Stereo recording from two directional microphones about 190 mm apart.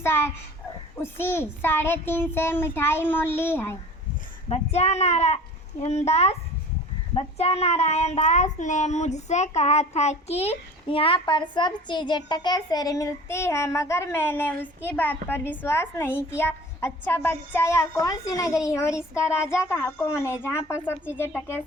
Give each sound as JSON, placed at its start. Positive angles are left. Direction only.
{"t": 0.9, "sound": "a child's voice", "side_deg": 10}
{"t": 4.4, "sound": "a child's voice", "side_deg": 35}
{"t": 16.4, "sound": "a sound", "side_deg": 10}
{"t": 17.1, "sound": "a child's voice", "side_deg": 10}